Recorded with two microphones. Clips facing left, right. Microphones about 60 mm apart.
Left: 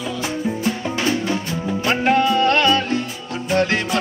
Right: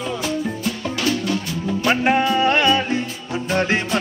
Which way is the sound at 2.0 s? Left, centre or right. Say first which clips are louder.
Left 3 dB; centre.